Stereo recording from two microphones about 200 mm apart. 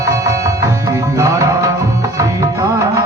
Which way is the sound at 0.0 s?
15° right (ahead or behind).